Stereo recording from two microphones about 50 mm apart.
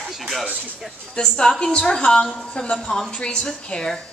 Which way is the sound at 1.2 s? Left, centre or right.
Centre.